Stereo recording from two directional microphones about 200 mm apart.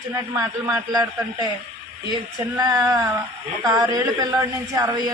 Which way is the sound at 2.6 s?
20° right (ahead or behind).